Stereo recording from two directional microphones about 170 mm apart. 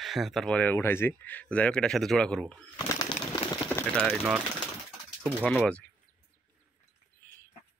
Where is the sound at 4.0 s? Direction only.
5° right (ahead or behind).